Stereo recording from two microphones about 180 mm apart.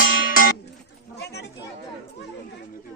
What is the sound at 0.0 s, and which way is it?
Music, 50° left (ahead or behind).